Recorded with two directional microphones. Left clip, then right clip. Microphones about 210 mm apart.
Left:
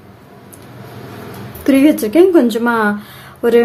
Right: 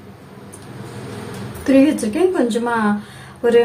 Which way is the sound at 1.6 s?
55° left (ahead or behind).